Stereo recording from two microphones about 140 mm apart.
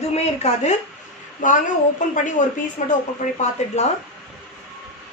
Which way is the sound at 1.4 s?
65° left (ahead or behind).